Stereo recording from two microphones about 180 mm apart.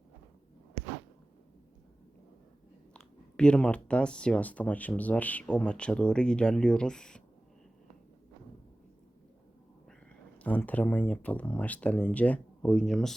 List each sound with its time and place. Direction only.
2.9 s speech: 5° left (ahead or behind)
10.3 s speech: 10° left (ahead or behind)